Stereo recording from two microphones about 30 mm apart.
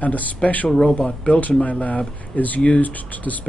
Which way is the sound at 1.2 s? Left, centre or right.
Left.